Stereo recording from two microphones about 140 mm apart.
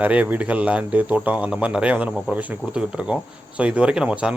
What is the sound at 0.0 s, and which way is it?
Speech, 10° right (ahead or behind).